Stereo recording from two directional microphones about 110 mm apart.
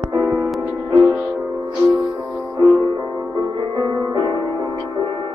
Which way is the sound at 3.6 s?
40° right (ahead or behind).